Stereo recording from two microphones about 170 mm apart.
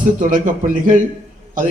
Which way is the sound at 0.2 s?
50° right (ahead or behind).